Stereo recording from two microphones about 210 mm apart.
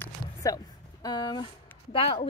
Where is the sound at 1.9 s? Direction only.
25° left (ahead or behind).